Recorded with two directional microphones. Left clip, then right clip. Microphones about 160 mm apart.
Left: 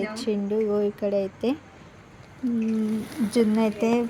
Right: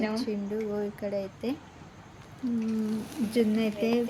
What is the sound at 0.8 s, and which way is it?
Speech, 25° left (ahead or behind).